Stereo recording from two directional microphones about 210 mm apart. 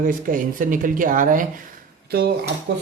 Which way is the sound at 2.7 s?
55° right (ahead or behind).